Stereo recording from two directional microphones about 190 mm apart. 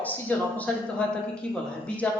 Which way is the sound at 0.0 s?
10° left (ahead or behind).